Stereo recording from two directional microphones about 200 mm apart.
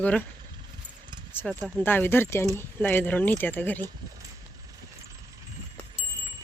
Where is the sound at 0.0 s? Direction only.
5° left (ahead or behind).